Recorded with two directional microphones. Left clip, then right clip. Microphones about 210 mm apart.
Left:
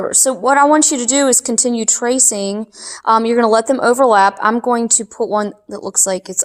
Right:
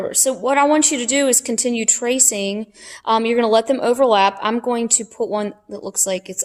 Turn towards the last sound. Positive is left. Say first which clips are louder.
# left 4 dB
turn(degrees=25)  # may be behind; listen again after turning